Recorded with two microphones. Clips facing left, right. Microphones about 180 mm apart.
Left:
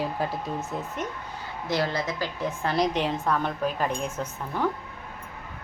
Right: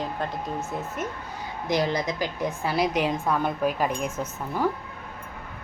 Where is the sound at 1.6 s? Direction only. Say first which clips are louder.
Right 2 dB; 15° right (ahead or behind).